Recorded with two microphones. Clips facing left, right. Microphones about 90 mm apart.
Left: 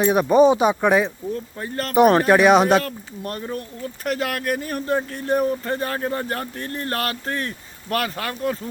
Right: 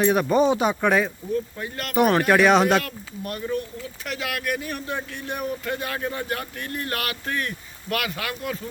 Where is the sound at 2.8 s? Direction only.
35° left (ahead or behind).